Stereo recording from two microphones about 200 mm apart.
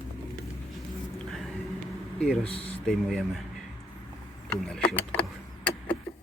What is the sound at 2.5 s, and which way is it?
Speech, 30° left (ahead or behind).